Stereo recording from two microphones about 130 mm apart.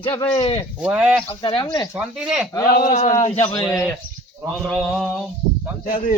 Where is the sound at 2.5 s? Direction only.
30° left (ahead or behind).